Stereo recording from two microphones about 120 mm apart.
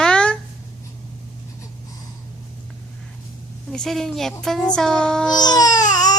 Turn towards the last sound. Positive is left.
turn(degrees=30)  # may be behind; listen again after turning